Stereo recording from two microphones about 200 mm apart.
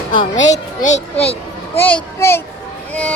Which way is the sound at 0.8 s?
35° left (ahead or behind).